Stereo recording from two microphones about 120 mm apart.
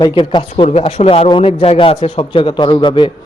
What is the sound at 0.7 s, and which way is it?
A man's voice, 60° left (ahead or behind).